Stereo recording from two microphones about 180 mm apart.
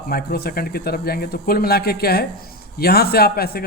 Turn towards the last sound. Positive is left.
turn(degrees=60)  # may be behind; listen again after turning